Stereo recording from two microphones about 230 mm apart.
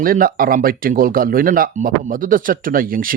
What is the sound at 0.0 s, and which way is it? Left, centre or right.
Speech, right.